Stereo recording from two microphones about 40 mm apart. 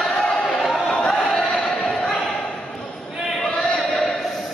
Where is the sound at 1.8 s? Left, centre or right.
Left.